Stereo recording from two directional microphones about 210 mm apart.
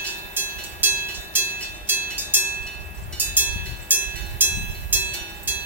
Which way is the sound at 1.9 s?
10° right (ahead or behind).